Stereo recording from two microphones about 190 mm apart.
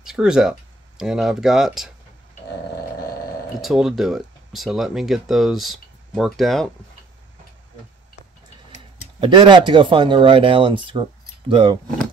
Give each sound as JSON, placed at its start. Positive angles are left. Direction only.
{"t": 0.0, "sound": "speech", "side_deg": -5}
{"t": 3.6, "sound": "speech", "side_deg": 0}
{"t": 9.2, "sound": "speech", "side_deg": -25}